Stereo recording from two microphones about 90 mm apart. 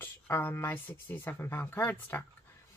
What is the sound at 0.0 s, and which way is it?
Speech, 25° left (ahead or behind).